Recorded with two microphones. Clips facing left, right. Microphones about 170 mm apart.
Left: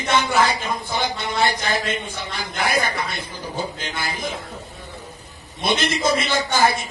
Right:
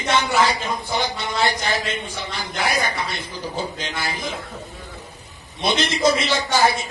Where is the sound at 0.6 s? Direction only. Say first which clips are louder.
Even; 50° right (ahead or behind).